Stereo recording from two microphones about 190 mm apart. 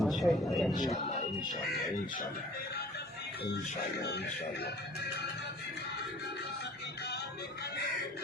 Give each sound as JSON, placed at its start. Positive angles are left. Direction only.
{"t": 0.0, "sound": "speech", "side_deg": 0}
{"t": 3.4, "sound": "speech", "side_deg": 60}